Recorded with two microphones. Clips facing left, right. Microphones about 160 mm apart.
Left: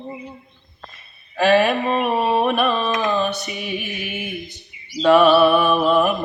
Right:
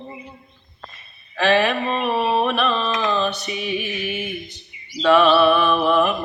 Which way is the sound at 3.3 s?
45° left (ahead or behind).